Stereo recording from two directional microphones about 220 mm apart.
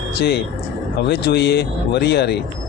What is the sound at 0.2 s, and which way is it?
Speech, 50° left (ahead or behind).